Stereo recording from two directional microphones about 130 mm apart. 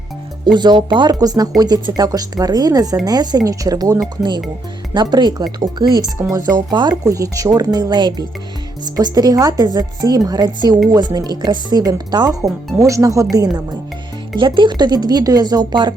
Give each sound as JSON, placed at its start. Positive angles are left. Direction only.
{"t": 0.4, "sound": "a woman's voice", "side_deg": -35}